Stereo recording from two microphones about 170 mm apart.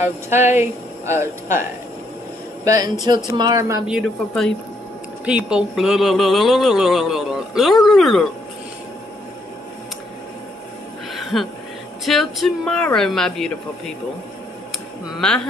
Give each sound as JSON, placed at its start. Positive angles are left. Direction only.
{"t": 0.0, "sound": "speech", "side_deg": -15}
{"t": 2.6, "sound": "speech", "side_deg": -20}
{"t": 3.8, "sound": "speech", "side_deg": -5}
{"t": 11.1, "sound": "a sound", "side_deg": 0}
{"t": 12.0, "sound": "speech", "side_deg": 0}
{"t": 15.1, "sound": "speech", "side_deg": 5}